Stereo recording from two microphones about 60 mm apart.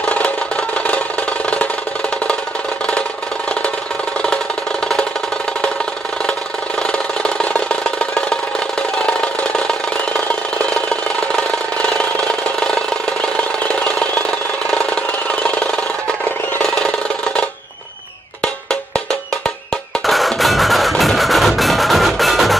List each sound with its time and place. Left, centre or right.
0.1 s music: left
6.8 s a sound: centre
18.4 s cowbell: centre
20.1 s music: centre